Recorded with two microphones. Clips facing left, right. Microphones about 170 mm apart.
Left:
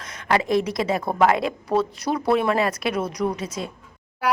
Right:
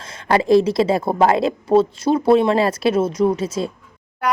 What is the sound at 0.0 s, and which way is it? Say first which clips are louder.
A woman's voice: right 4 dB; 30° right (ahead or behind).